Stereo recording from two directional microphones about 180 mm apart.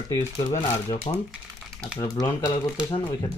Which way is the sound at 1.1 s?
30° left (ahead or behind).